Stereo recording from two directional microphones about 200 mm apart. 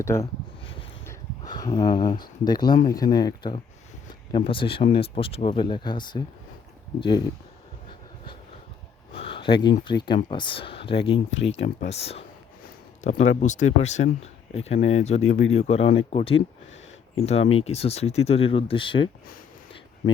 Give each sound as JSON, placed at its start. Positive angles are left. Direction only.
{"t": 0.0, "sound": "speech", "side_deg": 15}
{"t": 9.1, "sound": "a sound", "side_deg": 25}
{"t": 9.8, "sound": "speech", "side_deg": 20}
{"t": 11.3, "sound": "speech", "side_deg": 65}
{"t": 11.9, "sound": "speech", "side_deg": 30}
{"t": 15.2, "sound": "speech", "side_deg": 85}
{"t": 15.5, "sound": "speech", "side_deg": 30}